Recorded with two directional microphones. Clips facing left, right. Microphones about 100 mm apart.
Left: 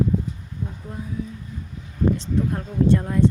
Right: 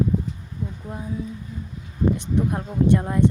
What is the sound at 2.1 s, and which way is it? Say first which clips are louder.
A woman's voice: right 1 dB; 15° right (ahead or behind).